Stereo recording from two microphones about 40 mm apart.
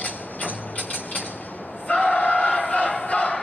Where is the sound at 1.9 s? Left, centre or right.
Left.